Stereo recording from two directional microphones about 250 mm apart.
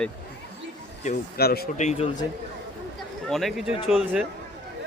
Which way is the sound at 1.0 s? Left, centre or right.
Left.